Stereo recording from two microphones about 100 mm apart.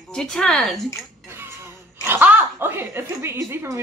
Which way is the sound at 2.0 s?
20° right (ahead or behind).